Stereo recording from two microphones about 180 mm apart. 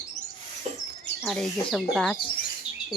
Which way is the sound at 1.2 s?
Centre (ahead or behind).